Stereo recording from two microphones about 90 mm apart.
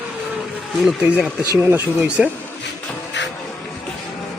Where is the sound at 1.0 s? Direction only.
10° right (ahead or behind).